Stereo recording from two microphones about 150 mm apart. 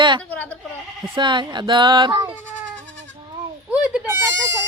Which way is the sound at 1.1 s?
30° right (ahead or behind).